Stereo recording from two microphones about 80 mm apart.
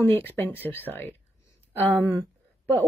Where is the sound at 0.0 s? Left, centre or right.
Left.